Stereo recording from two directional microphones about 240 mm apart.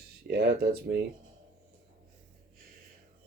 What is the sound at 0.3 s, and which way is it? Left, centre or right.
Speech, right.